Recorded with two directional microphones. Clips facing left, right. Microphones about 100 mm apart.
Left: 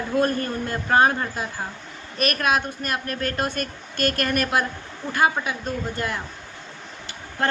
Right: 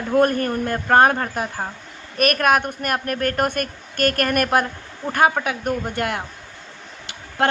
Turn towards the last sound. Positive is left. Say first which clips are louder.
# right 4 dB
turn(degrees=-70)  # may be behind; listen again after turning